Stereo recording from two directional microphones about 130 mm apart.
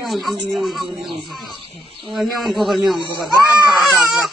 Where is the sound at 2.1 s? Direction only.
Centre (ahead or behind).